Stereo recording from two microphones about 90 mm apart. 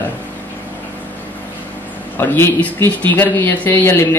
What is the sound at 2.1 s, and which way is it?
Speech, 25° left (ahead or behind).